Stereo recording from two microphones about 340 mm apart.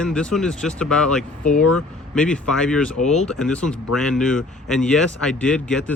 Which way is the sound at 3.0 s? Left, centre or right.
Left.